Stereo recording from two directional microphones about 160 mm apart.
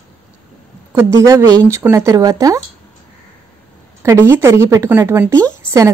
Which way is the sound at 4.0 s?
15° right (ahead or behind).